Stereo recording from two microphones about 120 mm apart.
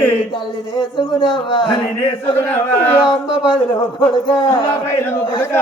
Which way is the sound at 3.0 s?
40° left (ahead or behind).